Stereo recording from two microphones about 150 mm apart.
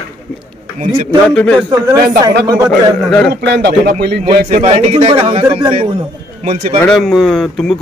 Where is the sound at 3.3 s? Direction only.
90° right.